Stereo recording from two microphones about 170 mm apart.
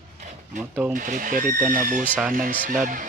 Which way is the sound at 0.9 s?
50° right (ahead or behind).